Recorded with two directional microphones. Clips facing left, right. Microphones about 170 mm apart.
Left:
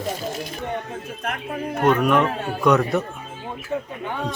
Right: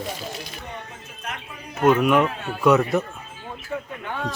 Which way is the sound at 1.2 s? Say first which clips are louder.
Left 8 dB; 55° left (ahead or behind).